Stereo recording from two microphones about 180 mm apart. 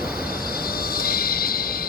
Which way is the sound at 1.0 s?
55° left (ahead or behind).